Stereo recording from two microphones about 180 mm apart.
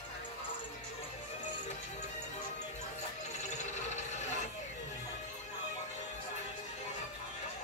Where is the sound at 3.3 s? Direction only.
40° left (ahead or behind).